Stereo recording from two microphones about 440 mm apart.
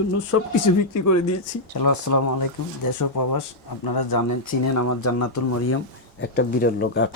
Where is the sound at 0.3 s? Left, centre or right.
Left.